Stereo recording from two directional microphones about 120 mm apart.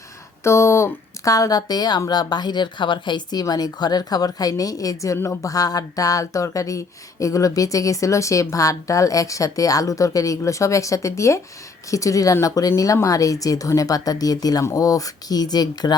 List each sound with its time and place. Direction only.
0.4 s speech: 25° left (ahead or behind)